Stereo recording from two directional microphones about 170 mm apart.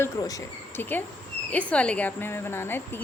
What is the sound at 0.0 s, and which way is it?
A woman's voice, 20° left (ahead or behind).